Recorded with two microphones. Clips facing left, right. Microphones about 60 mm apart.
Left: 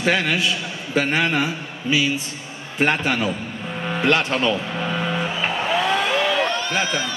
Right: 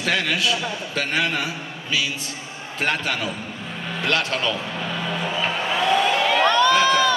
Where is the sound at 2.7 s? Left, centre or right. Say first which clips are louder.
Left 4 dB; centre.